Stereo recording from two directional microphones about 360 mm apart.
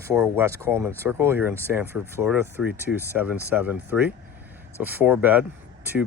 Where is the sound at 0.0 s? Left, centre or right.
Centre.